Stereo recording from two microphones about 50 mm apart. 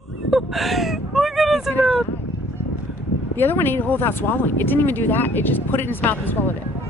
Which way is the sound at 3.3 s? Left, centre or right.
Left.